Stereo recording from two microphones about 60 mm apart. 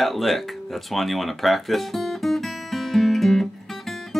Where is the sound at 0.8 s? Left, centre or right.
Centre.